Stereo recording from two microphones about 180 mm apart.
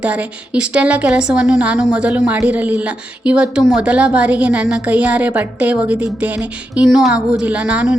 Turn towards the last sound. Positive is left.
turn(degrees=-5)  # may be behind; listen again after turning